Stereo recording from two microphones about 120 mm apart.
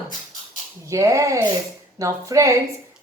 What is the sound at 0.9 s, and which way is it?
A woman's voice, 25° right (ahead or behind).